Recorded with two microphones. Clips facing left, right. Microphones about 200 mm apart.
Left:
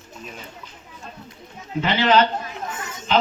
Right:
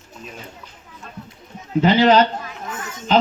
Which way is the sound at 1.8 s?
40° right (ahead or behind).